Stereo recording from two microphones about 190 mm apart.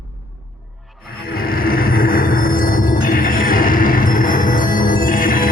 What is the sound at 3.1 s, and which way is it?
Music, 45° left (ahead or behind).